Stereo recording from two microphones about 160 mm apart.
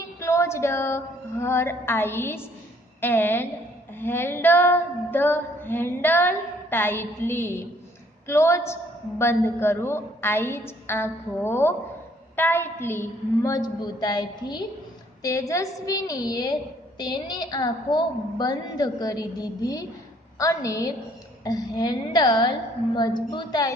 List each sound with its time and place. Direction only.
0.2 s female singing: 20° left (ahead or behind)
13.4 s a woman's voice: 25° left (ahead or behind)